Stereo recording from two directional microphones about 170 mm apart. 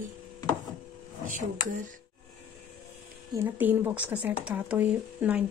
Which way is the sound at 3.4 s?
10° right (ahead or behind).